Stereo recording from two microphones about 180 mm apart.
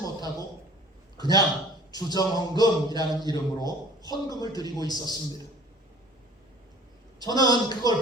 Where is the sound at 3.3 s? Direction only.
20° left (ahead or behind).